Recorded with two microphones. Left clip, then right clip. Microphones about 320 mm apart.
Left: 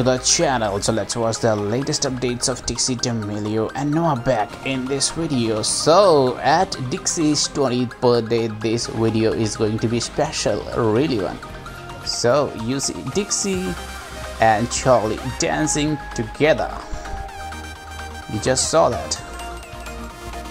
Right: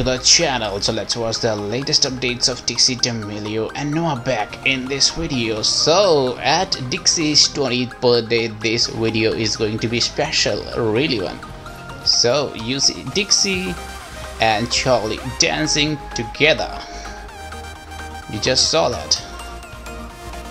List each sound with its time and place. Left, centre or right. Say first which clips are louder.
0.0 s speech: right 2 dB; centre
12.2 s speech: left 3 dB; centre
14.7 s speech: left 1 dB; centre
18.4 s speech: even; centre